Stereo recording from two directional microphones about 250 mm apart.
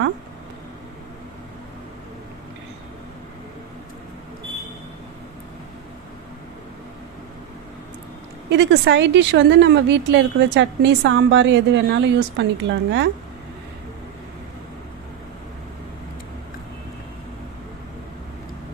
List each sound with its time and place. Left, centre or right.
8.4 s a woman's voice: right